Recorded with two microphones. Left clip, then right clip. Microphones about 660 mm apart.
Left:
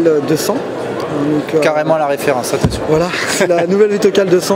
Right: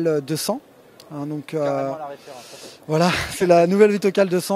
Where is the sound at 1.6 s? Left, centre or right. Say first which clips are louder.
Left 10 dB; centre.